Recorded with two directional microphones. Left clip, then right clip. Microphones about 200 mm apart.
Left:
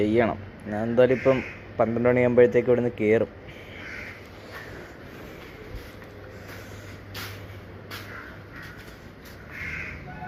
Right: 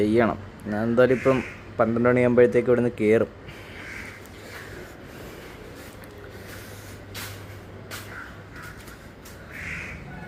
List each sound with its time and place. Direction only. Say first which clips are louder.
0.0 s a man's voice: right 1 dB; 15° right (ahead or behind)